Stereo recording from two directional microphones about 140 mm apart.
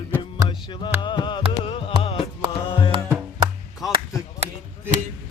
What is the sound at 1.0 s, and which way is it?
Music, 35° left (ahead or behind).